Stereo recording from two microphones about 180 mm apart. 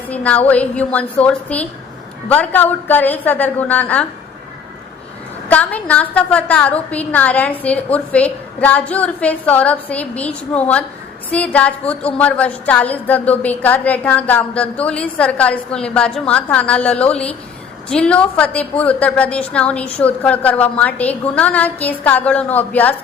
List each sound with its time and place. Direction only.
0.1 s a woman's voice: 10° left (ahead or behind)
5.5 s a woman's voice: 10° left (ahead or behind)